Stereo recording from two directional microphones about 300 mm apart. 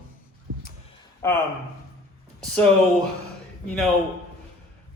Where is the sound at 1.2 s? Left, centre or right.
Centre.